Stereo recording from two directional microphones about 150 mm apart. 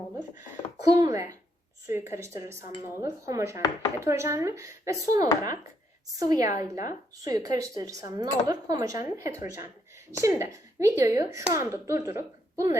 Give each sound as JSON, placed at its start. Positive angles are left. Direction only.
{"t": 0.9, "sound": "a woman's voice", "side_deg": -20}